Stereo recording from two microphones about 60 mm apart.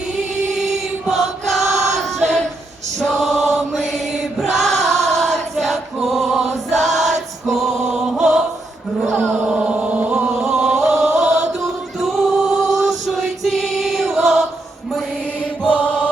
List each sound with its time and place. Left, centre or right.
1.1 s choir: centre
3.0 s chant: centre
9.1 s chant: right
9.5 s chant: centre
10.4 s a sound: centre
10.8 s chant: centre
11.9 s music: centre
12.8 s chant: centre
15.6 s mantra: left